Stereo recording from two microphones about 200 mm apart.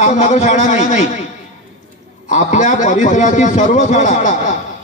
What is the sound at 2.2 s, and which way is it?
A man's voice, 40° left (ahead or behind).